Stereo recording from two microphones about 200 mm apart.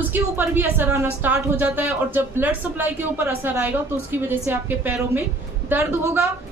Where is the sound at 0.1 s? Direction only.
10° right (ahead or behind).